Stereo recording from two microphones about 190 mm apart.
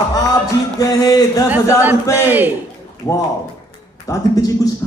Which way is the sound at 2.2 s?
10° right (ahead or behind).